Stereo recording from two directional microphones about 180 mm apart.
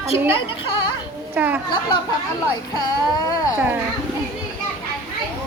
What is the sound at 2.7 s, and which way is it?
Speech, 20° left (ahead or behind).